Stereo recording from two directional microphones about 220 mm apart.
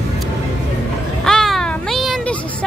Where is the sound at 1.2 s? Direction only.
Centre (ahead or behind).